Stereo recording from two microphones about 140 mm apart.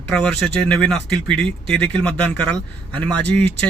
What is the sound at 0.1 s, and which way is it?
Speech, 5° left (ahead or behind).